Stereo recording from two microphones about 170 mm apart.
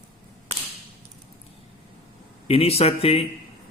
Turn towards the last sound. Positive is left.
turn(degrees=35)  # may be behind; listen again after turning